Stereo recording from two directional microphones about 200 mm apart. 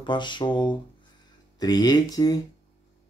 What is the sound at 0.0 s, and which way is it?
Speech, 25° left (ahead or behind).